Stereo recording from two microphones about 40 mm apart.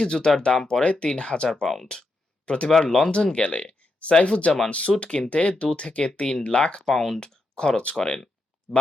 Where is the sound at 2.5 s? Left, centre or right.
Left.